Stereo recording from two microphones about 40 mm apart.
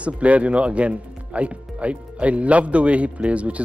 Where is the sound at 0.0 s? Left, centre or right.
Right.